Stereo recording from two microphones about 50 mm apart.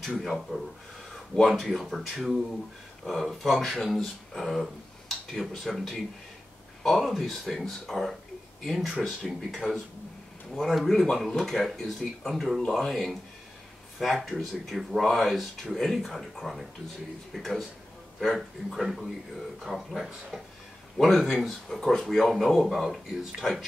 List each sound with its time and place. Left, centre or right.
0.0 s speech: centre
17.3 s speech: centre
18.7 s speech: centre